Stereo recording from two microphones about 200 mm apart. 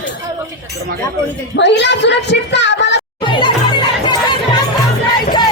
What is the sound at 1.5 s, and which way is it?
A woman's voice, 60° left (ahead or behind).